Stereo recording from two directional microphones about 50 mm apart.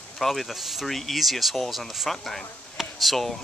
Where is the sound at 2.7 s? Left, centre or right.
Centre.